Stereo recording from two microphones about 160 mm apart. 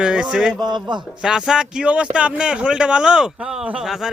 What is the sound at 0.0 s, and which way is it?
Speech, 5° right (ahead or behind).